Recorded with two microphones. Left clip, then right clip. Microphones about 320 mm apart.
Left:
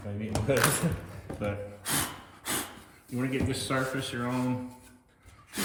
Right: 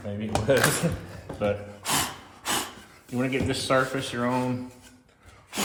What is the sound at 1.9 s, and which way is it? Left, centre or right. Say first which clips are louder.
Gasp: right 6 dB; centre.